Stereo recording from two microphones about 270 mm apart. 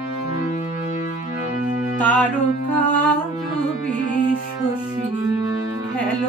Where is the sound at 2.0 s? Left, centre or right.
Centre.